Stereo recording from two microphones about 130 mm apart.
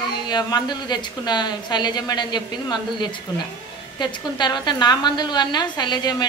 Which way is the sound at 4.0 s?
35° left (ahead or behind).